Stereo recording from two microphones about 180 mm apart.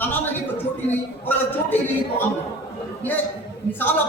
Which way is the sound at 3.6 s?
70° left (ahead or behind).